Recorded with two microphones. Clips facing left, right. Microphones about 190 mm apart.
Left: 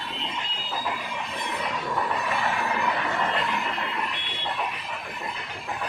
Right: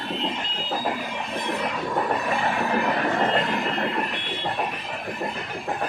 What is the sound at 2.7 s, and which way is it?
Train, 50° right (ahead or behind).